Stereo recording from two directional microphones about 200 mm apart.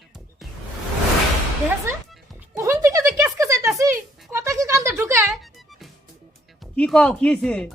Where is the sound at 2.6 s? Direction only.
15° right (ahead or behind).